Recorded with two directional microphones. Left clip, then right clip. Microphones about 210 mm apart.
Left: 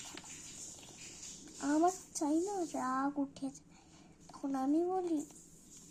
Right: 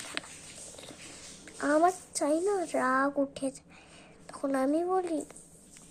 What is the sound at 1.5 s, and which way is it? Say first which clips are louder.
A woman's voice: right 7 dB; 20° right (ahead or behind).